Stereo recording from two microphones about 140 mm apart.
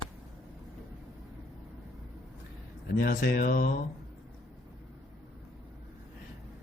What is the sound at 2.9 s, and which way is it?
Speech, 90° left.